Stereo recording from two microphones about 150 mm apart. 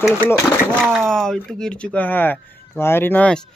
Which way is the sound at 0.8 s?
Centre (ahead or behind).